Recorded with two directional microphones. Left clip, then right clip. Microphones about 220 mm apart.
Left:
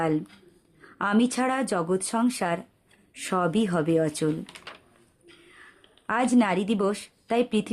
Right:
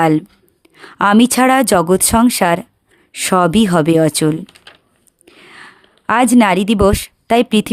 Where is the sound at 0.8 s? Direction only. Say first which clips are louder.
Right 13 dB; 50° right (ahead or behind).